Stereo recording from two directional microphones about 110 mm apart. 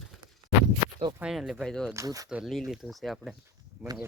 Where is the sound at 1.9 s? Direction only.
30° right (ahead or behind).